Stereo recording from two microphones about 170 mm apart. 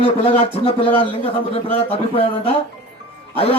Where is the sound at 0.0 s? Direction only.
35° left (ahead or behind).